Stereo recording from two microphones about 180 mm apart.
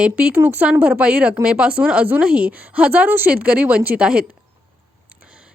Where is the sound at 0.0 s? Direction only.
5° right (ahead or behind).